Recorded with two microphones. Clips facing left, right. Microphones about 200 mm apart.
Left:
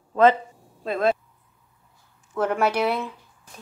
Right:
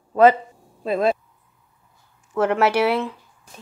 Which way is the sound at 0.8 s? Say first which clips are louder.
Right 2 dB; 10° right (ahead or behind).